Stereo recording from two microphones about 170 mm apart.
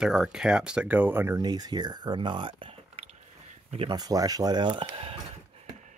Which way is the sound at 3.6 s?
30° right (ahead or behind).